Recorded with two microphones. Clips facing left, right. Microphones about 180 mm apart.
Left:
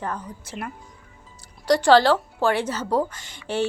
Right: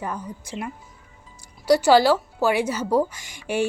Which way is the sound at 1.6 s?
10° right (ahead or behind).